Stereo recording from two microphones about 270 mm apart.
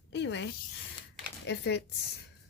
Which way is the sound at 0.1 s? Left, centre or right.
Left.